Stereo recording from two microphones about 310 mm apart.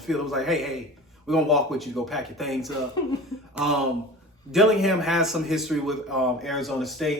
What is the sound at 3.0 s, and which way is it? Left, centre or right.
Speech, centre.